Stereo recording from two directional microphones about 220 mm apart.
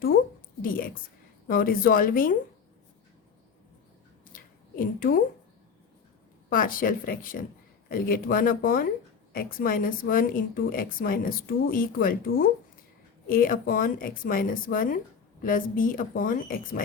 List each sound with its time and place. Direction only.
0.6 s a woman's voice: 40° left (ahead or behind)
4.9 s speech: 40° left (ahead or behind)
6.5 s speech: 40° left (ahead or behind)